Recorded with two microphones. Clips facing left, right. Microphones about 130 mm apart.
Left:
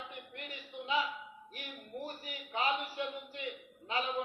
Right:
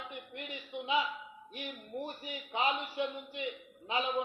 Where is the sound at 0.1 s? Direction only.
20° right (ahead or behind).